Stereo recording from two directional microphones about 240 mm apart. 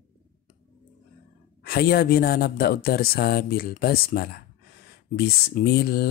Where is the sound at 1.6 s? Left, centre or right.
Left.